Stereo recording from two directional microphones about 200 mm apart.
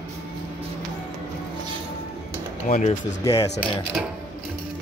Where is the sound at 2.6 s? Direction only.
40° left (ahead or behind).